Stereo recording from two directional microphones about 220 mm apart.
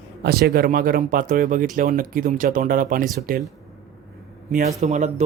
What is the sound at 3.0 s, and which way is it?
Speech, centre (ahead or behind).